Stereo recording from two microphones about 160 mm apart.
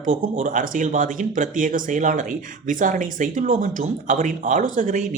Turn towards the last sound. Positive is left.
turn(degrees=-55)  # may be behind; listen again after turning